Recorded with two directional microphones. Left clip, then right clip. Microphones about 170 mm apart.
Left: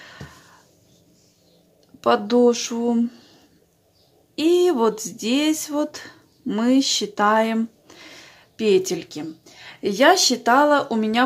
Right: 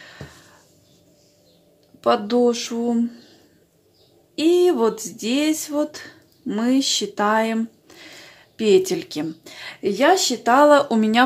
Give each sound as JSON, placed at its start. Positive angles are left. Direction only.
{"t": 0.0, "sound": "a sound", "side_deg": 5}
{"t": 2.0, "sound": "speech", "side_deg": 10}
{"t": 4.4, "sound": "speech", "side_deg": 10}
{"t": 9.2, "sound": "speech", "side_deg": -15}
{"t": 9.8, "sound": "speech", "side_deg": 10}
{"t": 10.5, "sound": "speech", "side_deg": 0}